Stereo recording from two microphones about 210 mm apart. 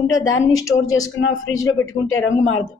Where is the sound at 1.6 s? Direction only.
75° left (ahead or behind).